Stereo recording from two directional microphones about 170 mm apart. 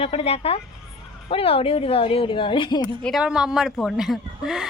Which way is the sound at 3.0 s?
5° right (ahead or behind).